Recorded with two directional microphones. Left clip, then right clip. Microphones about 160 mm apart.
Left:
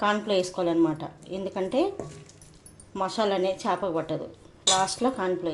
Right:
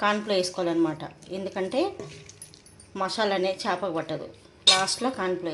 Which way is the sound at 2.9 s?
10° left (ahead or behind).